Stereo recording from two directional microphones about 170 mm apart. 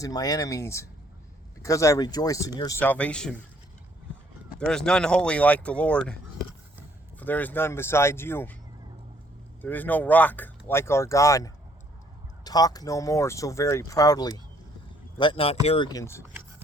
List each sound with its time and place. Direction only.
0.0 s speech: 20° left (ahead or behind)
2.8 s speech: 10° left (ahead or behind)
4.6 s speech: 5° left (ahead or behind)
7.2 s speech: 10° left (ahead or behind)
9.6 s speech: 10° left (ahead or behind); by 15.9 s 35° left (ahead or behind)
15.9 s speech: 20° left (ahead or behind)